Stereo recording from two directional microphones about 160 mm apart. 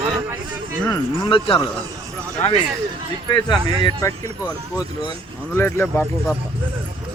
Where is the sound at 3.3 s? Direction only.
25° left (ahead or behind).